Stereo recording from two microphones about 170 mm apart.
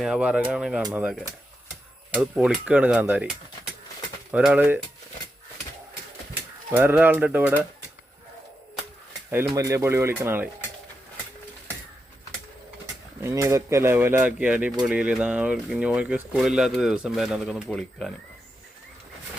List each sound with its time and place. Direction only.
0.0 s speech: 5° right (ahead or behind)
2.1 s speech: 5° right (ahead or behind)
6.7 s speech: 10° right (ahead or behind)
9.3 s speech: 15° right (ahead or behind)
13.2 s speech: 15° right (ahead or behind); by 18.1 s 5° left (ahead or behind)